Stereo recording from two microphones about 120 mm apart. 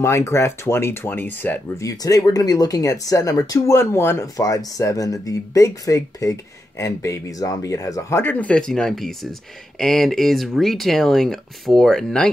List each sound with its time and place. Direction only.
0.0 s speech: 20° left (ahead or behind)
1.9 s speech: 30° left (ahead or behind); by 12.3 s 5° left (ahead or behind)